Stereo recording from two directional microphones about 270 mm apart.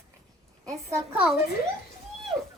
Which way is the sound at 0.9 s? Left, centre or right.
Centre.